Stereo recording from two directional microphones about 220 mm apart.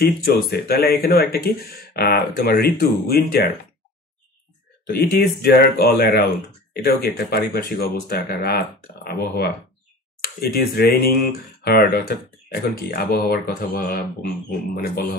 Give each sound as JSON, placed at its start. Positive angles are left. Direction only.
{"t": 0.0, "sound": "speech", "side_deg": 45}
{"t": 4.8, "sound": "speech", "side_deg": 45}
{"t": 10.5, "sound": "speech", "side_deg": 45}